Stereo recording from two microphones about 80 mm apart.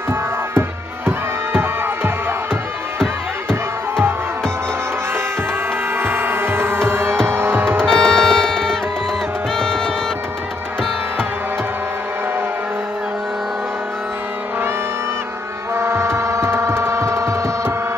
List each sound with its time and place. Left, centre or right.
0.1 s music: right
5.9 s music: right
7.8 s music: centre
15.7 s music: right